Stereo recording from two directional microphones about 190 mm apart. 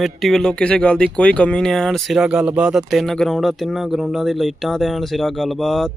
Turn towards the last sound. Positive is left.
turn(degrees=0)  # may be behind; listen again after turning